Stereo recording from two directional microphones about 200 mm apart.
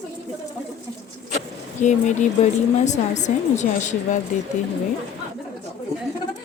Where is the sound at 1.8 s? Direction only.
40° left (ahead or behind).